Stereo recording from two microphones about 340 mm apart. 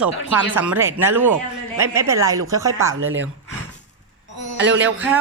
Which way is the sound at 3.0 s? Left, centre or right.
Right.